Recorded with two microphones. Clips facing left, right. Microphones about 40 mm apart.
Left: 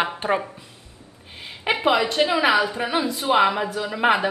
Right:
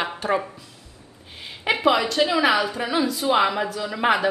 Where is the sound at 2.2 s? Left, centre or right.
Centre.